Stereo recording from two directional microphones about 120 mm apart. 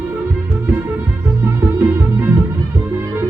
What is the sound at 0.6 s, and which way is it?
Music, 20° right (ahead or behind).